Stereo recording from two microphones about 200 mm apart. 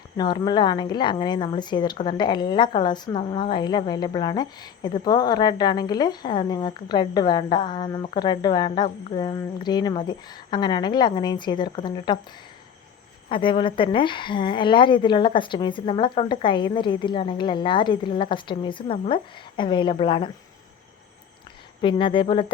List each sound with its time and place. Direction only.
0.2 s a woman's voice: 20° left (ahead or behind)
13.2 s a woman's voice: 25° left (ahead or behind)
21.8 s a woman's voice: 25° left (ahead or behind)